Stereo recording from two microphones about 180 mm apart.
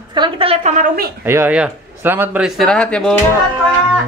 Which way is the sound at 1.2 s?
10° right (ahead or behind).